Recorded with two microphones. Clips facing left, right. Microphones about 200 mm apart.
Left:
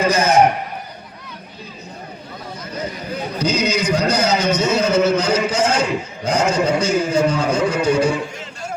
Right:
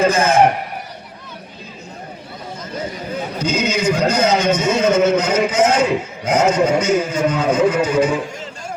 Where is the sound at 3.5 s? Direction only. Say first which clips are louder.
Right 2 dB; 50° right (ahead or behind).